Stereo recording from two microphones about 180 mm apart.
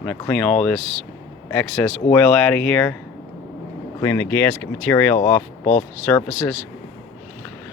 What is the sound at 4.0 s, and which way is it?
Speech, 15° left (ahead or behind).